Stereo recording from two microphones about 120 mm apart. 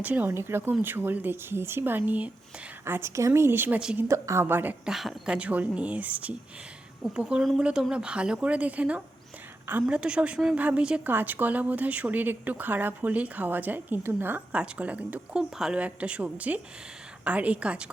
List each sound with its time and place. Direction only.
0.0 s a woman's voice: 15° right (ahead or behind)
3.8 s a woman's voice: 5° right (ahead or behind)
4.1 s a woman's voice: 25° right (ahead or behind)
4.9 s a woman's voice: 5° right (ahead or behind)